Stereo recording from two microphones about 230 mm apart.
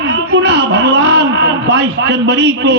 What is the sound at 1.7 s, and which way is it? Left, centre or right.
A man's voice, right.